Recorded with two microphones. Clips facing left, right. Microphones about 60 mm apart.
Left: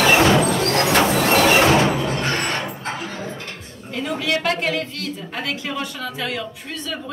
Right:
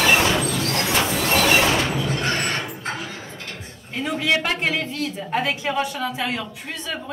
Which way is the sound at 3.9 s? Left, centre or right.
Right.